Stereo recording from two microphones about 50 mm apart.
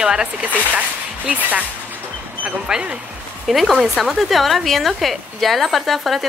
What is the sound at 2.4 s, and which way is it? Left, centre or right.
Speech, centre.